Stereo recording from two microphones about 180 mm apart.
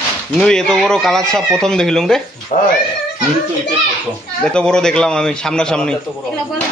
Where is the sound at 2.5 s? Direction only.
45° left (ahead or behind).